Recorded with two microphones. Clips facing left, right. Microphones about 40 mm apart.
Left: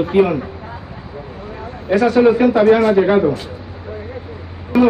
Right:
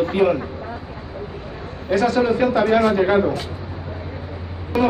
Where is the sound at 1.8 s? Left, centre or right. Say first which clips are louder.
Left 6 dB; left.